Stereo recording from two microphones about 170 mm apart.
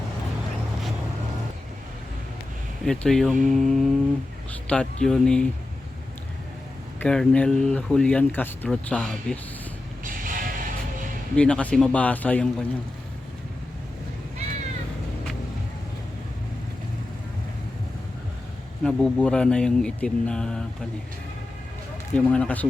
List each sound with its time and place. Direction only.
2.8 s speech: 5° left (ahead or behind)
7.0 s speech: 5° left (ahead or behind)
10.0 s music: 55° right (ahead or behind)
11.3 s speech: 5° left (ahead or behind)
18.8 s speech: 5° left (ahead or behind)
22.1 s speech: 5° left (ahead or behind)